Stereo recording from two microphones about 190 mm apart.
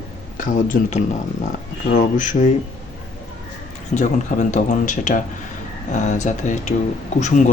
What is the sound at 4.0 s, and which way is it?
Speech, 40° left (ahead or behind).